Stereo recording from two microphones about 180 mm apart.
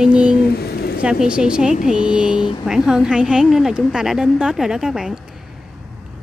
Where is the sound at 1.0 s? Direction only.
5° right (ahead or behind).